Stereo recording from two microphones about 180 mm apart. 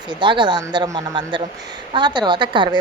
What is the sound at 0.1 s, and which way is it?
A woman's voice, 25° right (ahead or behind).